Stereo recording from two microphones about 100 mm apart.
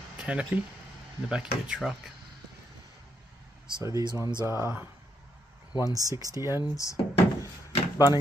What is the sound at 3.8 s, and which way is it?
Speech, 35° right (ahead or behind).